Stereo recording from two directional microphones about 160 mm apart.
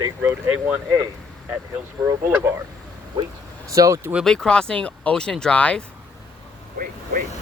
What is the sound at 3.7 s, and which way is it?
Speech, 20° right (ahead or behind).